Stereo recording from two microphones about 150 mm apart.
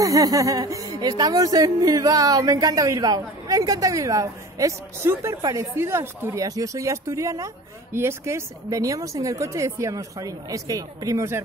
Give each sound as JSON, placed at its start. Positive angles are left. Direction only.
{"t": 0.0, "sound": "speech", "side_deg": -20}